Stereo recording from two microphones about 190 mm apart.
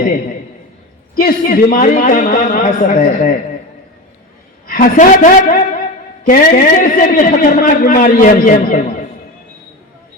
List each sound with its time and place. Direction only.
1.1 s a man's voice: 50° left (ahead or behind)
4.6 s a man's voice: 45° left (ahead or behind)